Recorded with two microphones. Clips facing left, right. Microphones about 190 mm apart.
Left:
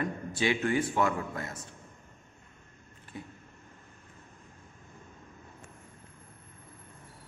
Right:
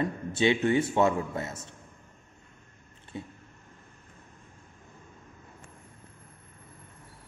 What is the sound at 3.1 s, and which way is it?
Speech, 25° right (ahead or behind).